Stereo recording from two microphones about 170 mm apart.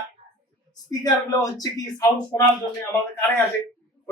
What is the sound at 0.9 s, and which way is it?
Speech, 20° left (ahead or behind).